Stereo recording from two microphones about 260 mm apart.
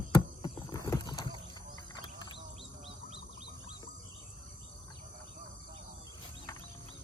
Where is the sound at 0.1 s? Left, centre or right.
Centre.